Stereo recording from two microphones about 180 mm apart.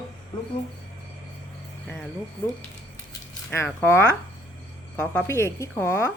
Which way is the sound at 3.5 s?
15° left (ahead or behind).